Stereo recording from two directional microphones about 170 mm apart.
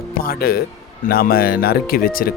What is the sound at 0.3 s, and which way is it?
Speech, 65° left (ahead or behind).